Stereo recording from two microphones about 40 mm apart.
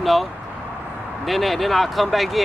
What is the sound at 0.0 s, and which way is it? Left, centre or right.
Vehicle, centre.